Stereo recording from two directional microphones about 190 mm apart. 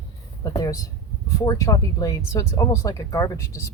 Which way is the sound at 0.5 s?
20° left (ahead or behind).